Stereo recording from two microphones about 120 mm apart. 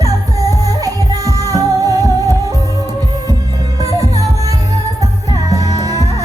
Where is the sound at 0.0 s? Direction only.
30° right (ahead or behind).